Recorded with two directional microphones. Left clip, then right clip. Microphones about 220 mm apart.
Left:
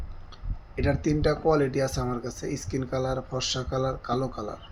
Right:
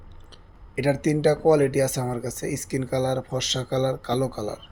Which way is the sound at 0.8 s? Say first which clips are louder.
Right 4 dB; 30° right (ahead or behind).